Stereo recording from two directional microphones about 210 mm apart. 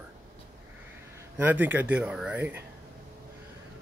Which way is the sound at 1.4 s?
10° right (ahead or behind).